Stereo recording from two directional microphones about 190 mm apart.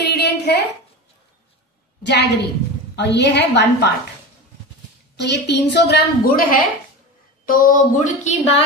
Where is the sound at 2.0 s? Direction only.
65° left (ahead or behind).